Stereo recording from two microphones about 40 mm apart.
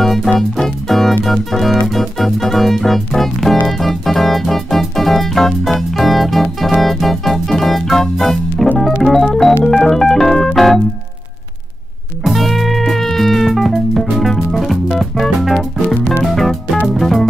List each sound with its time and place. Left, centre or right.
0.0 s music: centre
8.7 s organ: centre
12.3 s music: centre